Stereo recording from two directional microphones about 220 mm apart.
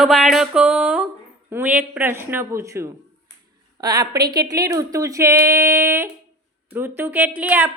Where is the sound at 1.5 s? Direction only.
10° right (ahead or behind).